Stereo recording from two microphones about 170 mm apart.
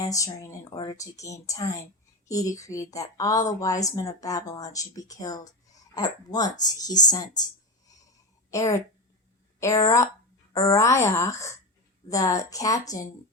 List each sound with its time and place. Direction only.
0.0 s a woman's voice: 20° left (ahead or behind)
8.4 s a woman's voice: 20° left (ahead or behind)